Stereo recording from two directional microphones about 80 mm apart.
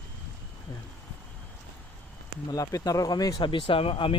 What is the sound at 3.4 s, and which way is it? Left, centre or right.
Speech, left.